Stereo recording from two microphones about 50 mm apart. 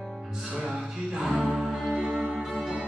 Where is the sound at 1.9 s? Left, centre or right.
Centre.